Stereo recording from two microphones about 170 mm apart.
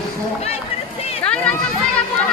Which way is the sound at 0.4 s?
35° left (ahead or behind).